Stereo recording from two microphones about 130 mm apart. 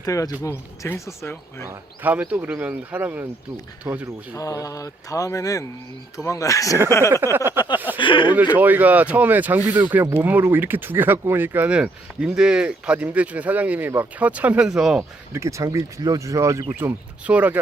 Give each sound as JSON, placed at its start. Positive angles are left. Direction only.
{"t": 0.0, "sound": "speech", "side_deg": 25}
{"t": 1.6, "sound": "speech", "side_deg": -20}
{"t": 4.4, "sound": "speech", "side_deg": 25}
{"t": 7.3, "sound": "speech", "side_deg": -15}
{"t": 7.9, "sound": "speech", "side_deg": 40}
{"t": 8.5, "sound": "speech", "side_deg": -15}
{"t": 15.3, "sound": "speech", "side_deg": -25}
{"t": 16.7, "sound": "speech", "side_deg": -10}